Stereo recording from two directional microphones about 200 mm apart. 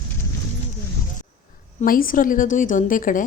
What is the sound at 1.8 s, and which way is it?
A woman's voice, 45° left (ahead or behind).